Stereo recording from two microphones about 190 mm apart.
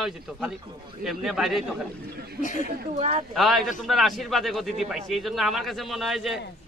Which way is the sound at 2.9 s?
35° right (ahead or behind).